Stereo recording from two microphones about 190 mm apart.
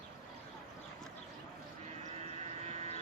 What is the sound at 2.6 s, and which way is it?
Vehicle, 35° right (ahead or behind).